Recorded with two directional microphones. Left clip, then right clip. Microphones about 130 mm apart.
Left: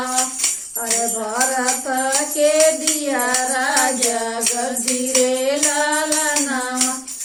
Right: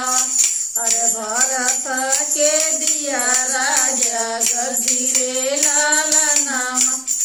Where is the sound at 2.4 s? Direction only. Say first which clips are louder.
Left 2 dB; 35° right (ahead or behind).